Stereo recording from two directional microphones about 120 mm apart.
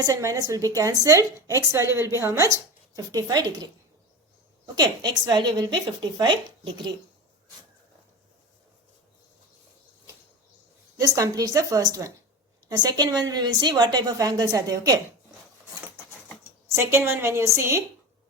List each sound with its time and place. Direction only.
0.0 s a woman's voice: 25° right (ahead or behind)
10.9 s a woman's voice: 30° right (ahead or behind)
16.7 s a woman's voice: 20° right (ahead or behind)